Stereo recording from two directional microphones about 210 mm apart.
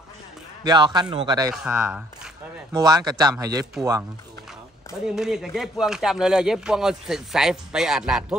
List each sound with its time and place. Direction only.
0.7 s a man's voice: 20° right (ahead or behind)
1.5 s speech: 5° right (ahead or behind)
2.7 s speech: 20° right (ahead or behind)
5.0 s speech: centre (ahead or behind)